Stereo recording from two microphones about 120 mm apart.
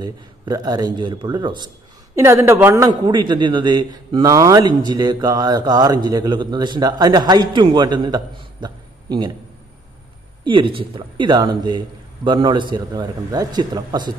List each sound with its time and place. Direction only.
0.0 s speech: 35° right (ahead or behind)
2.1 s speech: 25° right (ahead or behind)
3.1 s speech: 40° right (ahead or behind)
10.4 s speech: 45° right (ahead or behind)